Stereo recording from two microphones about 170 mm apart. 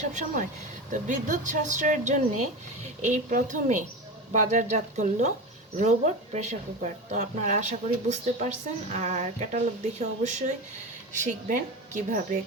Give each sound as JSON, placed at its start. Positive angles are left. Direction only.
{"t": 0.0, "sound": "speech", "side_deg": -45}